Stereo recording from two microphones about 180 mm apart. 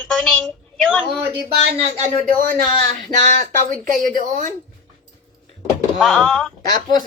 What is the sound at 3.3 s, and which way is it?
Speech, 50° right (ahead or behind).